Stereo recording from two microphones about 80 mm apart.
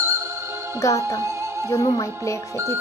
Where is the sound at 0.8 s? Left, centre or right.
Left.